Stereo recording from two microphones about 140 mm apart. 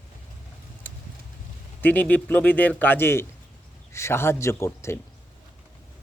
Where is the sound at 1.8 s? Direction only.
10° left (ahead or behind).